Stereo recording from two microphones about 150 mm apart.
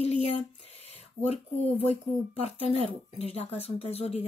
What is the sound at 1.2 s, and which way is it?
Speech, 45° left (ahead or behind).